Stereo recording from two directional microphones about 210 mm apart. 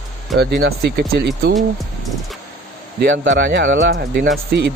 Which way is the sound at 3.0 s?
60° right (ahead or behind).